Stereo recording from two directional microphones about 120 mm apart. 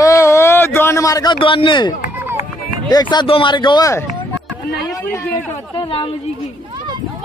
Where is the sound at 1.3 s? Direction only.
45° left (ahead or behind).